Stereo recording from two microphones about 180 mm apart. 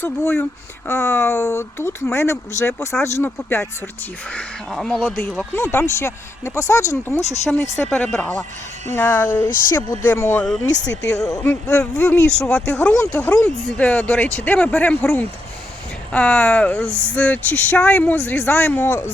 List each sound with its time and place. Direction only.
0.0 s speech: 10° left (ahead or behind)
4.4 s speech: 5° left (ahead or behind)
7.9 s speech: 5° left (ahead or behind)
9.5 s speech: 50° left (ahead or behind)
9.7 s speech: 10° left (ahead or behind)
10.7 s speech: 85° left
11.2 s speech: 5° left (ahead or behind)
11.7 s speech: 15° left (ahead or behind)